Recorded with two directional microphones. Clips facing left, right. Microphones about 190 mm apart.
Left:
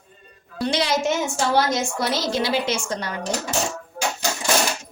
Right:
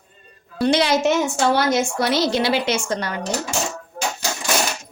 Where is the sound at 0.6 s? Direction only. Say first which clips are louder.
Right 5 dB; 60° right (ahead or behind).